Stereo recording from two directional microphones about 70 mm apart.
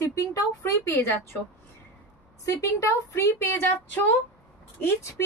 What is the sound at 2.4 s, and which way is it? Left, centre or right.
A woman's voice, left.